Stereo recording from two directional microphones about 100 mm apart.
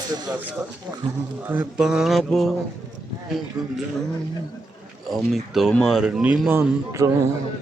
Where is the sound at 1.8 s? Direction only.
5° right (ahead or behind).